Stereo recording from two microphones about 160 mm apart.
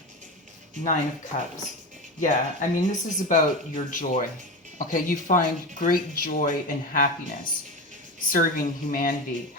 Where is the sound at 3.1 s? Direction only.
55° left (ahead or behind).